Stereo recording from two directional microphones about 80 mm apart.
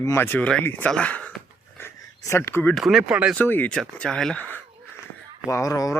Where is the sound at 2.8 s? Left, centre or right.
Centre.